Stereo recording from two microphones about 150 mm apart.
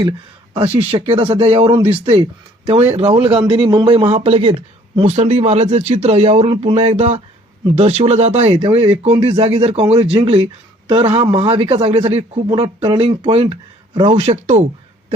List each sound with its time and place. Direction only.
0.5 s a man's voice: 40° right (ahead or behind)
4.1 s a man's voice: 40° right (ahead or behind)